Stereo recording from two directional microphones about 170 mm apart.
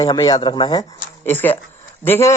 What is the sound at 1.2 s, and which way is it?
Speech, 10° left (ahead or behind).